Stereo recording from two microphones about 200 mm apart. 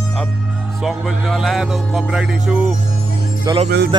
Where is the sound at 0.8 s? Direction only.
Centre (ahead or behind).